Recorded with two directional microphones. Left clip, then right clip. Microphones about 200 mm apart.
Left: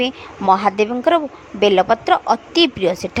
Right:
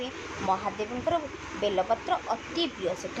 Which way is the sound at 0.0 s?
50° left (ahead or behind).